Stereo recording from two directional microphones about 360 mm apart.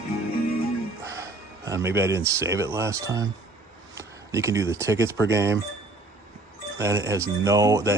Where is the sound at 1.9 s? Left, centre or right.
Centre.